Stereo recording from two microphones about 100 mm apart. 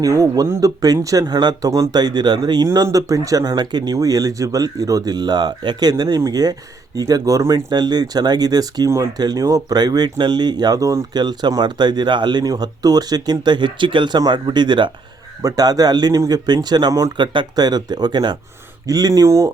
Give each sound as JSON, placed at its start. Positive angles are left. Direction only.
{"t": 0.0, "sound": "speech", "side_deg": -35}
{"t": 15.4, "sound": "speech", "side_deg": -40}